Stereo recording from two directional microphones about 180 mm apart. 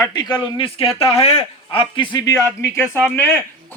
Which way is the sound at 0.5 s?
30° left (ahead or behind).